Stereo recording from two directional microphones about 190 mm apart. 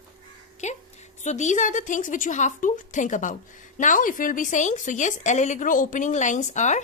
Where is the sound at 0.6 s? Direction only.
35° left (ahead or behind).